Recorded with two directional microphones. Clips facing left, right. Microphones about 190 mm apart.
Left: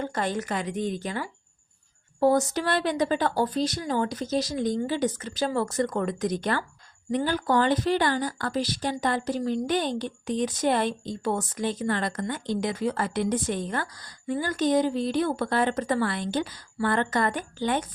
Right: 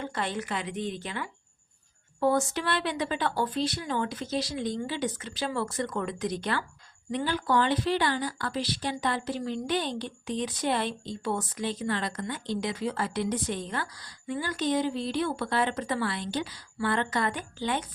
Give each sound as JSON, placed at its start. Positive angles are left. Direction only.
{"t": 0.0, "sound": "a woman's voice", "side_deg": 45}